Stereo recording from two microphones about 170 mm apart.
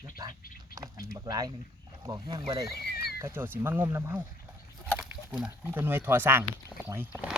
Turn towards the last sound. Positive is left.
turn(degrees=-10)  # may be behind; listen again after turning